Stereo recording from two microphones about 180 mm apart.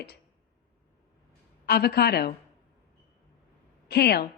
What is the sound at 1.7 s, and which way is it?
Speech, 65° left (ahead or behind).